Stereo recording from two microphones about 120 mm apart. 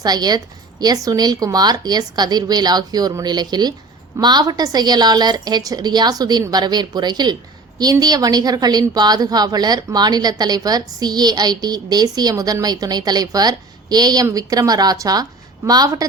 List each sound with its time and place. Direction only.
0.0 s a woman's voice: 35° right (ahead or behind)